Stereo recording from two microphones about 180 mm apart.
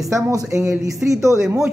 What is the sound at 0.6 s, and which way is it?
Speech, 5° right (ahead or behind).